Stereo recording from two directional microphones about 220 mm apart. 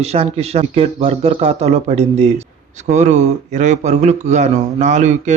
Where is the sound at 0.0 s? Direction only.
30° right (ahead or behind).